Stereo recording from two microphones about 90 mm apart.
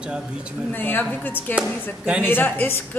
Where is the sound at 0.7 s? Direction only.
25° left (ahead or behind).